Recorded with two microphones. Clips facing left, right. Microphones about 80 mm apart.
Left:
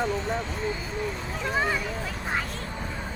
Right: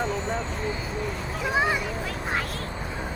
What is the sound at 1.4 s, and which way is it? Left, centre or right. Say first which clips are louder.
Speech: right 2 dB; centre.